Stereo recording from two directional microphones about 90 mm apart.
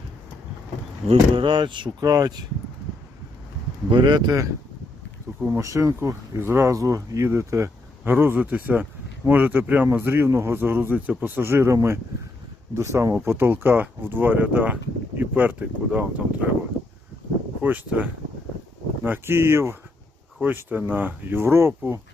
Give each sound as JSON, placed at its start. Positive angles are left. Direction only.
{"t": 1.0, "sound": "speech", "side_deg": -90}
{"t": 2.0, "sound": "speech", "side_deg": -45}
{"t": 3.8, "sound": "speech", "side_deg": -55}
{"t": 5.5, "sound": "speech", "side_deg": -35}
{"t": 17.6, "sound": "speech", "side_deg": -20}